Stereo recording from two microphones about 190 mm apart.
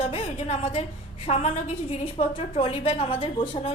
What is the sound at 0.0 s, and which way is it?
A woman's voice, 30° left (ahead or behind).